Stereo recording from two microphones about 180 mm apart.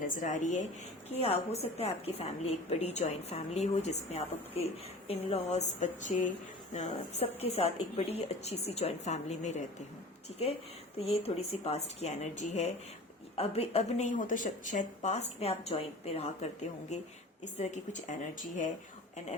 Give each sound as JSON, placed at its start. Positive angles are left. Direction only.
{"t": 0.0, "sound": "a woman's voice", "side_deg": 45}
{"t": 10.9, "sound": "a woman's voice", "side_deg": 35}